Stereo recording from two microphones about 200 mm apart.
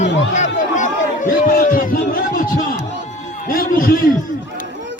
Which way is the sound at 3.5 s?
45° left (ahead or behind).